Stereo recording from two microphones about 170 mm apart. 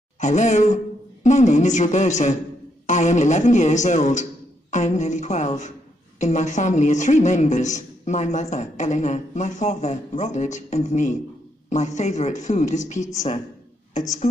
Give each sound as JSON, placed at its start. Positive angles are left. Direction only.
{"t": 0.2, "sound": "a man's voice", "side_deg": 45}